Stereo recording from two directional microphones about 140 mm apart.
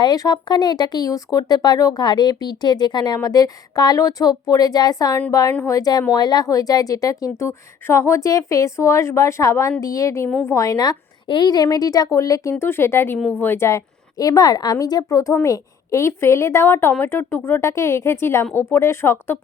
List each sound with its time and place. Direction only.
0.0 s a woman's voice: 30° left (ahead or behind)